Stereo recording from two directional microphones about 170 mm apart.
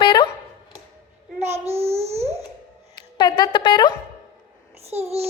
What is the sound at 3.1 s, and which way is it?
Speech, 25° left (ahead or behind).